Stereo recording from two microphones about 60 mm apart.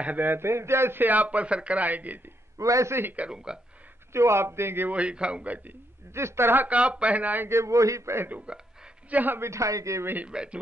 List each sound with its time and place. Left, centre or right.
0.0 s a man's voice: right
1.0 s speech: right
2.6 s a man's voice: right
3.0 s speech: right
3.3 s speech: centre
4.1 s a man's voice: right
4.9 s speech: centre
6.1 s a man's voice: right
6.7 s speech: right
7.4 s a man's voice: right
8.3 s speech: right
9.4 s a man's voice: right
10.2 s speech: centre